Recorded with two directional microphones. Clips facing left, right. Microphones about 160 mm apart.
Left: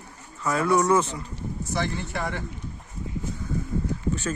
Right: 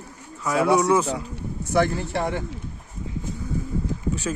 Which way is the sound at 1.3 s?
60° right (ahead or behind).